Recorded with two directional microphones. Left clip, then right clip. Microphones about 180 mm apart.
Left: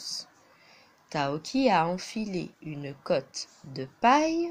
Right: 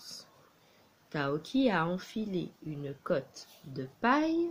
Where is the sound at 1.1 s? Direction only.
25° left (ahead or behind).